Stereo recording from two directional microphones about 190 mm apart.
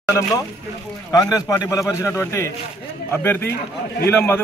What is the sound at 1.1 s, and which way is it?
A man's voice, 20° left (ahead or behind).